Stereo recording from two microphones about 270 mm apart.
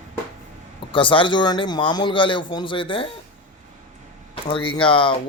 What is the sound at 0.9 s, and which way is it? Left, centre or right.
Speech, centre.